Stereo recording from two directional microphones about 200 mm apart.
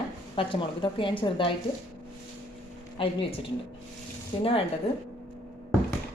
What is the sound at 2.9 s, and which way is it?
Speech, 25° left (ahead or behind).